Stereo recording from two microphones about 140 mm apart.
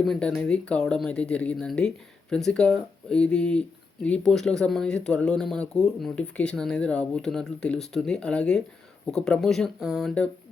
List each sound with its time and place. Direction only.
0.0 s speech: 5° left (ahead or behind)